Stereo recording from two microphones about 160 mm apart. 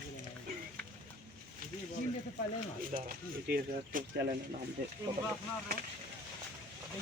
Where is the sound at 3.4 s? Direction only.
80° right.